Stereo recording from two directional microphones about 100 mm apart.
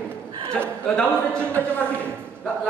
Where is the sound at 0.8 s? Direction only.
10° left (ahead or behind).